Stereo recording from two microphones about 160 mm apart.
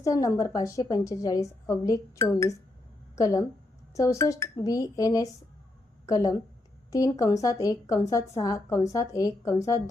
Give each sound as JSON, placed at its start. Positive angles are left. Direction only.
{"t": 0.0, "sound": "a woman's voice", "side_deg": 20}